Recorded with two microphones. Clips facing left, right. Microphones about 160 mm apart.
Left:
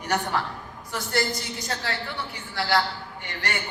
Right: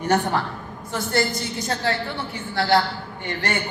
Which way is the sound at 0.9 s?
25° right (ahead or behind).